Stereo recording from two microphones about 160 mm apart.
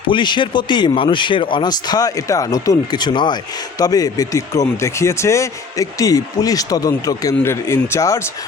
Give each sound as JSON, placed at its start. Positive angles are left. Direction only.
{"t": 0.1, "sound": "speech", "side_deg": 30}